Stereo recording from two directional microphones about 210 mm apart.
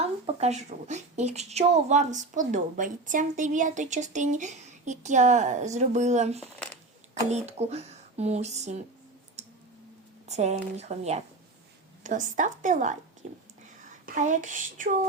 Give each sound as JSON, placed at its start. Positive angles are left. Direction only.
{"t": 0.0, "sound": "speech", "side_deg": -30}
{"t": 10.2, "sound": "speech", "side_deg": -30}